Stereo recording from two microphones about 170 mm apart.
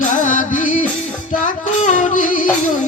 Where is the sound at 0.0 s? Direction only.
45° left (ahead or behind).